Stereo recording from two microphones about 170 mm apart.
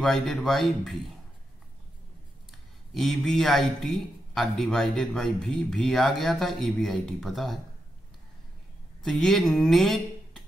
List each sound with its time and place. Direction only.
0.0 s a man's voice: centre (ahead or behind)
2.9 s a man's voice: centre (ahead or behind)
9.0 s speech: centre (ahead or behind)